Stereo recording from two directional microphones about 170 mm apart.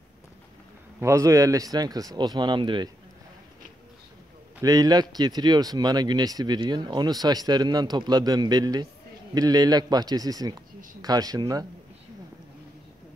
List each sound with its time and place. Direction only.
0.9 s speech: 15° right (ahead or behind)
4.6 s speech: 20° right (ahead or behind)